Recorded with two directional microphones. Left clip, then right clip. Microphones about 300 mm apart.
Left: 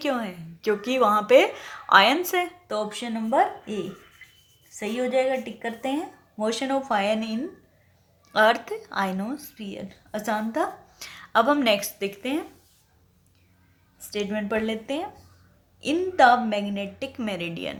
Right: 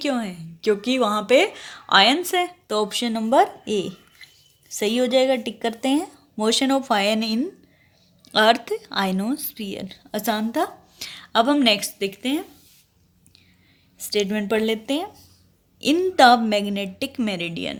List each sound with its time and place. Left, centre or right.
0.0 s a woman's voice: right
14.1 s speech: right